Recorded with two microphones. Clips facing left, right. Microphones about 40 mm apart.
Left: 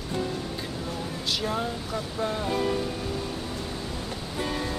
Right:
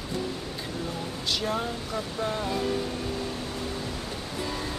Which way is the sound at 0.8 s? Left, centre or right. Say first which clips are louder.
Right 1 dB; centre.